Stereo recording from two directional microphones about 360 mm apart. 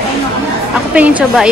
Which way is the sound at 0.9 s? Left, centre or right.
Centre.